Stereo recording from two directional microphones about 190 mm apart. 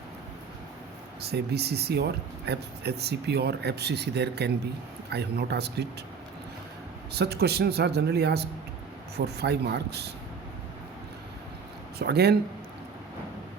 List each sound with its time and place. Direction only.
1.2 s speech: 60° right (ahead or behind)
7.2 s speech: 60° right (ahead or behind)
11.9 s speech: 60° right (ahead or behind)